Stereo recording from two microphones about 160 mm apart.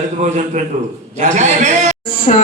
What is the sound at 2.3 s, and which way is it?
Speech, 45° left (ahead or behind).